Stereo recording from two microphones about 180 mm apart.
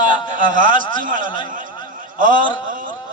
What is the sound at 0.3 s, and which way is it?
A man's voice, 45° right (ahead or behind).